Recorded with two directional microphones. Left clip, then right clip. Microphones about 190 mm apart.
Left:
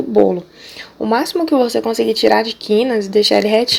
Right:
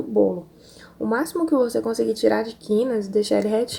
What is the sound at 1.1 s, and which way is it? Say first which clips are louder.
Speech: left 6 dB; 10° left (ahead or behind).